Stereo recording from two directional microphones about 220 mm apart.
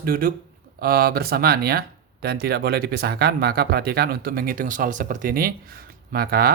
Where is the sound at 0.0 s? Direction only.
40° right (ahead or behind).